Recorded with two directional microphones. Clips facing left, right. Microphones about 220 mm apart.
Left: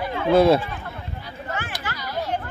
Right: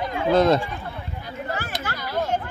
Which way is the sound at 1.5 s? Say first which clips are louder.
Even; 35° right (ahead or behind).